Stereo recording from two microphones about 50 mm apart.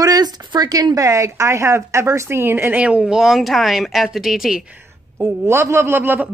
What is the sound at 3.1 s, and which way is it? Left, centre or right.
Speech, centre.